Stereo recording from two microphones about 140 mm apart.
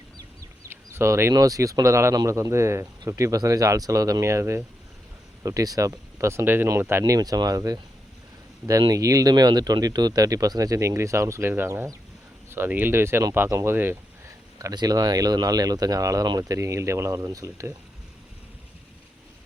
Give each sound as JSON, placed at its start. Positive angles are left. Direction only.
{"t": 0.2, "sound": "speech", "side_deg": -20}
{"t": 14.6, "sound": "speech", "side_deg": -30}